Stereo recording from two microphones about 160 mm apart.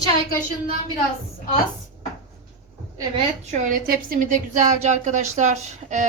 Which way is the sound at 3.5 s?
60° right (ahead or behind).